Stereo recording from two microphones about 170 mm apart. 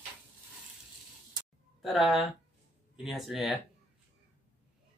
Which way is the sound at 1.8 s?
Centre (ahead or behind).